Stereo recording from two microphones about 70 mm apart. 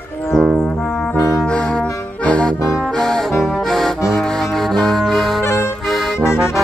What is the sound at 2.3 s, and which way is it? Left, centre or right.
Brass instrument, centre.